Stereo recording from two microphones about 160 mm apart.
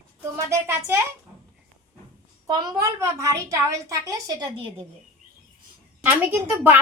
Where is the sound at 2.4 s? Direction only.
25° right (ahead or behind).